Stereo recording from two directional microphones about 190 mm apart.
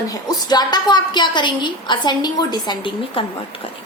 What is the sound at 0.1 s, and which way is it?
A woman's voice, 20° left (ahead or behind).